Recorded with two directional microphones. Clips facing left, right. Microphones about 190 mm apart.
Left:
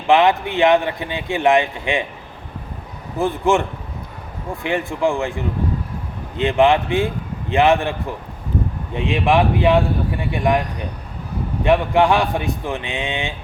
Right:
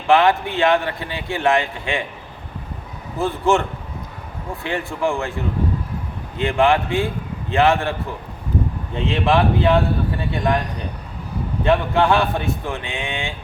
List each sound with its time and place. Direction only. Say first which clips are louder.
0.1 s speech: left 1 dB; 20° left (ahead or behind)
3.2 s speech: left 1 dB; 15° left (ahead or behind)
9.0 s speech: left 1 dB; 15° left (ahead or behind)
11.6 s speech: left 2 dB; 15° left (ahead or behind)